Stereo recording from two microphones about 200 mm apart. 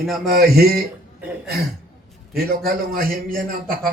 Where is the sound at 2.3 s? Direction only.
50° right (ahead or behind).